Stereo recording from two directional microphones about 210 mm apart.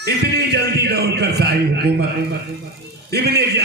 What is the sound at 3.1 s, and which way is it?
Mantra, 50° right (ahead or behind).